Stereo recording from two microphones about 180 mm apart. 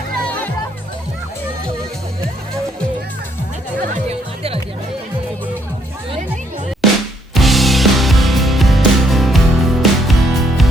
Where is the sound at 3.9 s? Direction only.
35° right (ahead or behind).